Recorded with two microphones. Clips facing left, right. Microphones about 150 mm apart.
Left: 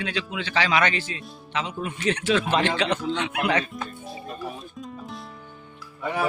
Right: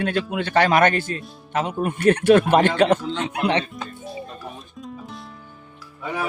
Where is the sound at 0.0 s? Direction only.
50° right (ahead or behind).